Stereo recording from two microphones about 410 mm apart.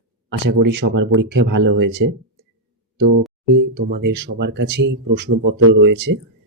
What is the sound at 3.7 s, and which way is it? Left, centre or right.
Speech, right.